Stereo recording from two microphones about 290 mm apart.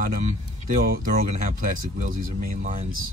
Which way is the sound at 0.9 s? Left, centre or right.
Right.